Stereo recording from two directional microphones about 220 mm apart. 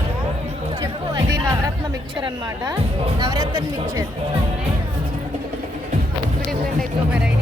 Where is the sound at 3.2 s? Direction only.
15° right (ahead or behind).